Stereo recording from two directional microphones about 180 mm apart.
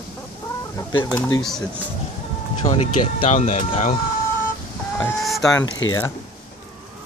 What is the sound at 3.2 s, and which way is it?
Speech, 40° left (ahead or behind).